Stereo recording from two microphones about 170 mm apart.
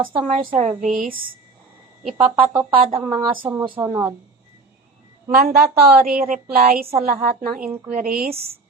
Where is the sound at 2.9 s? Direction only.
25° right (ahead or behind).